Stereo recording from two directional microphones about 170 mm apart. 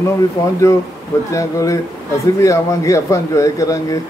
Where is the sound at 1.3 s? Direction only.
20° left (ahead or behind).